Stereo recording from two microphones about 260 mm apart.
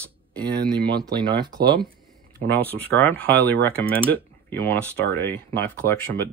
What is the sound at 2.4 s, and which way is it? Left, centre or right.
Speech, centre.